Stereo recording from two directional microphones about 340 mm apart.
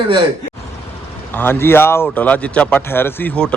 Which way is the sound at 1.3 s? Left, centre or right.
Centre.